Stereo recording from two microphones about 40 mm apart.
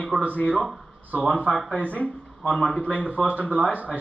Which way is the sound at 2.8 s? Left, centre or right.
Left.